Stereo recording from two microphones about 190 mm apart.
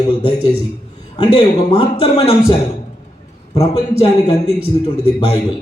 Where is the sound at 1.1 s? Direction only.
30° left (ahead or behind).